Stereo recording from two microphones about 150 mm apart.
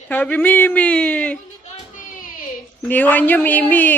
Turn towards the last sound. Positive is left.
turn(degrees=10)  # may be behind; listen again after turning